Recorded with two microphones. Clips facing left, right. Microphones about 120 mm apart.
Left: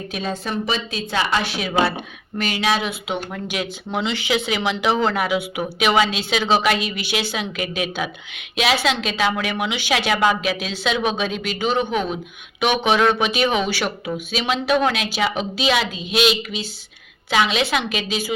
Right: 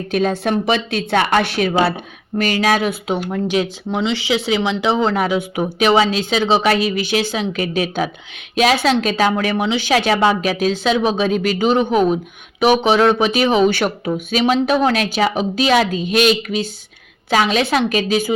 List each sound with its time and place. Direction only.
0.1 s a woman's voice: 55° right (ahead or behind)
2.4 s speech: 45° right (ahead or behind)
4.0 s a woman's voice: 25° right (ahead or behind)
13.7 s a woman's voice: 45° right (ahead or behind)